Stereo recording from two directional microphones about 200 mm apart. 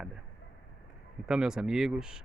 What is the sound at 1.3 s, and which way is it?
Speech, 5° right (ahead or behind).